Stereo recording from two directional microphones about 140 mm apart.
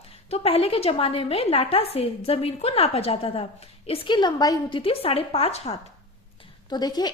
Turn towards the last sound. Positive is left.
turn(degrees=30)  # may be behind; listen again after turning